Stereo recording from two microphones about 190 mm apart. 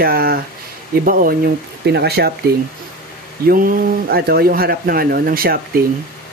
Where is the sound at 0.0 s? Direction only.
55° right (ahead or behind).